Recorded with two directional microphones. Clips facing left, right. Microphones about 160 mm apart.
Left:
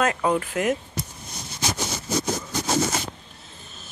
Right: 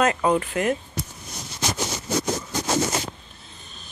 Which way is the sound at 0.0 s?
Centre (ahead or behind).